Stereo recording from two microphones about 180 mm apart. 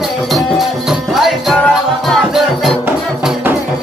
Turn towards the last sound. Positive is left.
turn(degrees=-5)  # may be behind; listen again after turning